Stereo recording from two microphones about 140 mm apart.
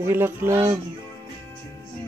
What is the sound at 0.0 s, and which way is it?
Speech, 15° right (ahead or behind).